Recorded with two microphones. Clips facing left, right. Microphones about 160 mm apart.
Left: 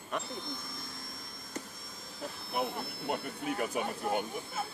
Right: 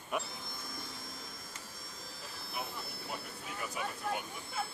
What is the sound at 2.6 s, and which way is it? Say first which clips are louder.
Speech: left 8 dB; 60° left (ahead or behind).